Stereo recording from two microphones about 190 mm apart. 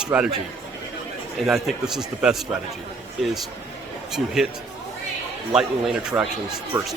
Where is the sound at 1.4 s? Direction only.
Centre (ahead or behind).